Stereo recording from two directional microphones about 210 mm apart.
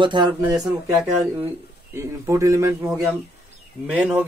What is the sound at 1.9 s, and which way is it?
Speech, 15° right (ahead or behind).